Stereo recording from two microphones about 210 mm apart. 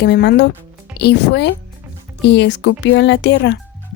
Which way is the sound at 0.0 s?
50° left (ahead or behind).